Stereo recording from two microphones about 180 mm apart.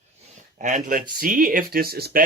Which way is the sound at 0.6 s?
45° right (ahead or behind).